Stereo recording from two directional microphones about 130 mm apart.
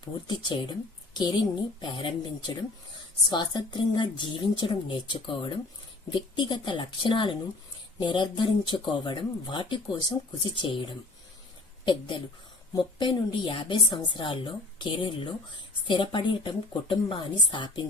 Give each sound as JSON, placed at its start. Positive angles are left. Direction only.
{"t": 0.0, "sound": "a woman's voice", "side_deg": 35}
{"t": 3.2, "sound": "a woman's voice", "side_deg": 35}